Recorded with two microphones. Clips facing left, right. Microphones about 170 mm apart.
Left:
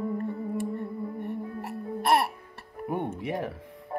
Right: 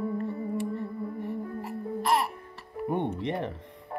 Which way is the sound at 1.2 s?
65° left (ahead or behind).